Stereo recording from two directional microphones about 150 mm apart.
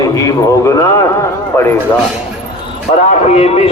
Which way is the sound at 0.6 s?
20° left (ahead or behind).